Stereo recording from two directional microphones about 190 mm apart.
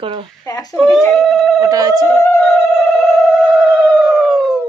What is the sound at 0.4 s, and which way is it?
Speech, 20° left (ahead or behind).